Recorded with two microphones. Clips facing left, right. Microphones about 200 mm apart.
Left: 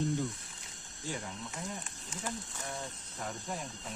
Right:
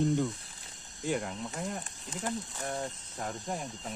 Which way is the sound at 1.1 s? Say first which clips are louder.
Right 8 dB; 60° right (ahead or behind).